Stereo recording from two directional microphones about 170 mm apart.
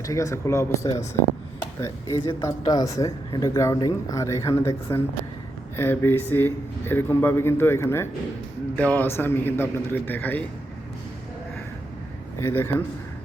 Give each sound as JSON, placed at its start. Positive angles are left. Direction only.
{"t": 0.0, "sound": "speech", "side_deg": 20}
{"t": 12.4, "sound": "speech", "side_deg": 15}